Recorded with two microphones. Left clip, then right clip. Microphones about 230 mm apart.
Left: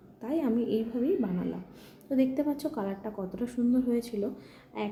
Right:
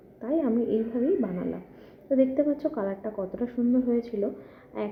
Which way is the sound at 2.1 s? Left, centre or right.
Centre.